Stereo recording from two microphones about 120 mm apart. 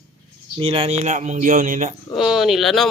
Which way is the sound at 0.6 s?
50° right (ahead or behind).